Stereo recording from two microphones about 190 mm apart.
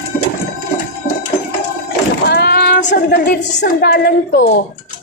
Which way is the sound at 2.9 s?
65° left (ahead or behind).